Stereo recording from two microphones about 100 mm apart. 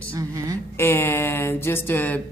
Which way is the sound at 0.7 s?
25° left (ahead or behind).